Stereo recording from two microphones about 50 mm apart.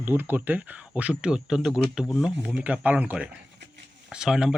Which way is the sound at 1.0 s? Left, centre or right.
Right.